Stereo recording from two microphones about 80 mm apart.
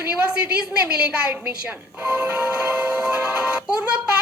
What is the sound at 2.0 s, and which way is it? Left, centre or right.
Music, centre.